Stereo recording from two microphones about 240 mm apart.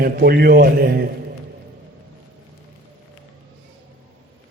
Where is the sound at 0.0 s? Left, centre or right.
Right.